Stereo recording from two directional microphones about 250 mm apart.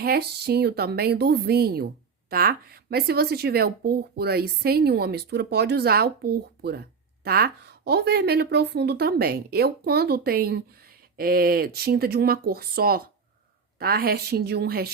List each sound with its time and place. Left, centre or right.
0.0 s a woman's voice: right